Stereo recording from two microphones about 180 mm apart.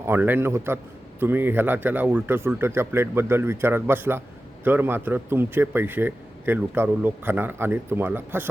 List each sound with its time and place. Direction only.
0.0 s a man's voice: 10° right (ahead or behind)